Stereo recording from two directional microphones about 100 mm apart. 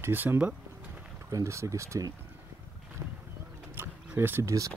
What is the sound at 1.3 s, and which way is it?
Speech, 30° right (ahead or behind).